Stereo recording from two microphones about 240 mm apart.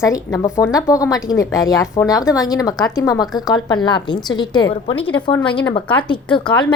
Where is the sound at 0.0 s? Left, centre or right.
Centre.